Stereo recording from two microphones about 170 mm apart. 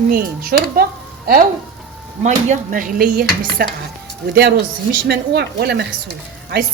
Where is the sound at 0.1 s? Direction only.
60° right (ahead or behind).